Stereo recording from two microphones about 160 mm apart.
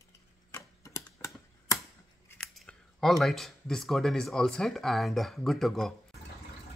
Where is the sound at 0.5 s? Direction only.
20° left (ahead or behind).